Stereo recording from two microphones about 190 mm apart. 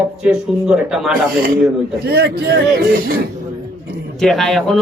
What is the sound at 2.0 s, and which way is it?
Speech, 55° right (ahead or behind).